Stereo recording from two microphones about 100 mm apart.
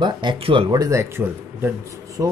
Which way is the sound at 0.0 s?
50° right (ahead or behind).